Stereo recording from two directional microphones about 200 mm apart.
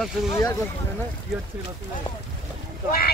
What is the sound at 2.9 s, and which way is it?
Vehicle, 50° left (ahead or behind).